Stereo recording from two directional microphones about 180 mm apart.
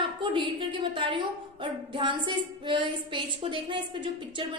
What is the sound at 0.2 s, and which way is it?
A woman's voice, 25° right (ahead or behind).